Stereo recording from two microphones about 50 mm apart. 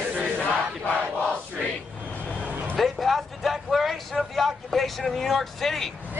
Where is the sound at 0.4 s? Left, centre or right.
Left.